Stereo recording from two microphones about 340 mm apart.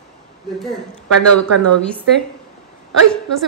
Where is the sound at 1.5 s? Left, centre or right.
Right.